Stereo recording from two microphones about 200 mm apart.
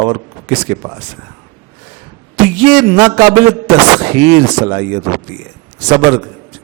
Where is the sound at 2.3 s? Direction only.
15° right (ahead or behind).